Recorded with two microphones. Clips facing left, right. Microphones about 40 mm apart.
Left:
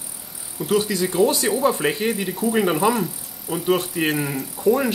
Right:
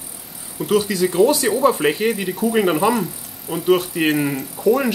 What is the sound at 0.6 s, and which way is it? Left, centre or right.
Speech, right.